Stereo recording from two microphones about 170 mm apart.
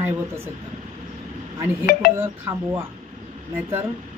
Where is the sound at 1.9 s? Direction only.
60° left (ahead or behind).